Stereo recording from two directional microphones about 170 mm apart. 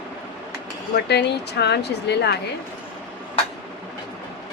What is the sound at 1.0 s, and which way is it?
Speech, 80° left.